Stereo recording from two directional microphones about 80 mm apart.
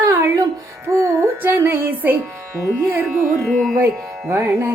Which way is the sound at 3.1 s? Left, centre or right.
Centre.